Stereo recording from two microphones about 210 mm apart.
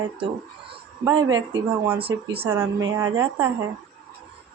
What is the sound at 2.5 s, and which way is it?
A woman's voice, 10° right (ahead or behind).